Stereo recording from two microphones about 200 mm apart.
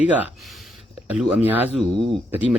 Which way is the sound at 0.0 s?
5° right (ahead or behind).